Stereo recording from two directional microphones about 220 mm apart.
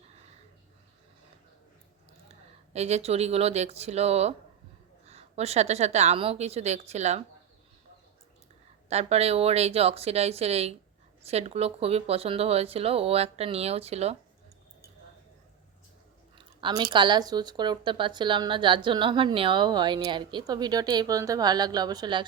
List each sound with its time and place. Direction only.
2.7 s speech: 30° right (ahead or behind)
8.9 s speech: 30° right (ahead or behind)
16.4 s speech: 20° right (ahead or behind)